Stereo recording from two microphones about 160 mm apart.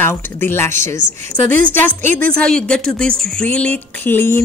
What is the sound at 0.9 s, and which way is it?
Speech, 55° right (ahead or behind).